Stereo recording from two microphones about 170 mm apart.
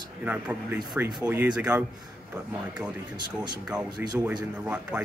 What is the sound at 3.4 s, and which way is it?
A man's voice, 5° right (ahead or behind).